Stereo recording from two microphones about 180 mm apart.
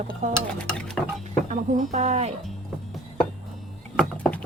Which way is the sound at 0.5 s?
5° left (ahead or behind).